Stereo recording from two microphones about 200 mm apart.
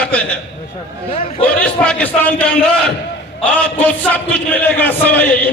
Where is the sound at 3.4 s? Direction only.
5° left (ahead or behind).